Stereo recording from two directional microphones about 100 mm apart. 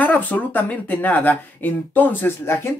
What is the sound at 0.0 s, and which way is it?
Speech, 15° left (ahead or behind).